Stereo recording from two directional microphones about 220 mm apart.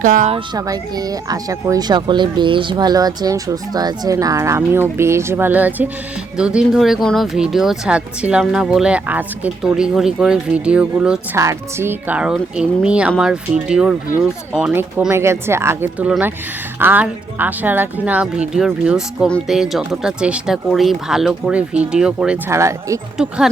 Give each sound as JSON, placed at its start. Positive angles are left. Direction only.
{"t": 0.0, "sound": "speech", "side_deg": -35}
{"t": 0.3, "sound": "speech", "side_deg": -15}
{"t": 23.1, "sound": "speech", "side_deg": 0}